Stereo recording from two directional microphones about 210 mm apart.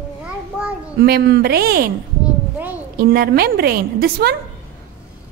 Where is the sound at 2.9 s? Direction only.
45° right (ahead or behind).